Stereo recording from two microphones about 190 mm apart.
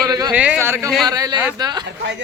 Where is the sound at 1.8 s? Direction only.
65° right (ahead or behind).